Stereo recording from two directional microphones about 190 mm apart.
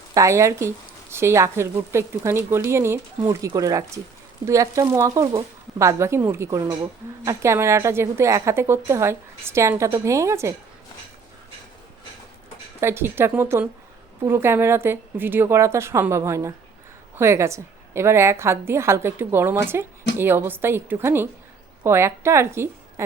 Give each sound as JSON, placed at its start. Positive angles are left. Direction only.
{"t": 0.1, "sound": "a woman's voice", "side_deg": -15}
{"t": 12.8, "sound": "a woman's voice", "side_deg": -10}